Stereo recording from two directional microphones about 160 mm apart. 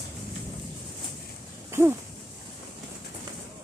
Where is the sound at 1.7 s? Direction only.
15° right (ahead or behind).